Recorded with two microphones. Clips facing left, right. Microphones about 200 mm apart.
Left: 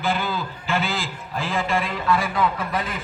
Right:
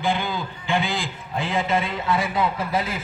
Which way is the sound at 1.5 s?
20° right (ahead or behind).